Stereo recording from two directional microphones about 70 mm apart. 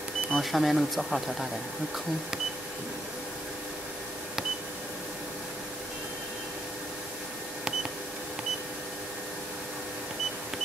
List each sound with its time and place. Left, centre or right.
0.3 s speech: centre